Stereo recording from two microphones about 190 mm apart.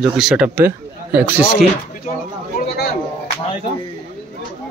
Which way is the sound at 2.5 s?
50° left (ahead or behind).